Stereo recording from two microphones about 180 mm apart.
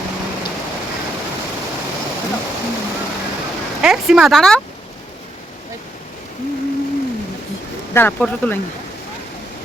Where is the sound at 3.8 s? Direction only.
5° right (ahead or behind).